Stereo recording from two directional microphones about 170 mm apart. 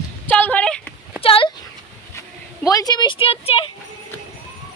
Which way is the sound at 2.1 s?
20° left (ahead or behind).